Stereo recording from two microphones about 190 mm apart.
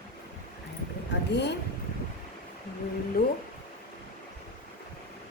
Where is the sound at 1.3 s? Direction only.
65° left (ahead or behind).